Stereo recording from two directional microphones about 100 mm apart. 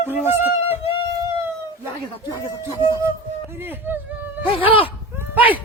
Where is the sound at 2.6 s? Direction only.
45° left (ahead or behind).